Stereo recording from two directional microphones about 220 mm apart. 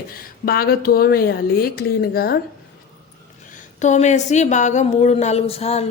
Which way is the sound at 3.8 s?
30° left (ahead or behind).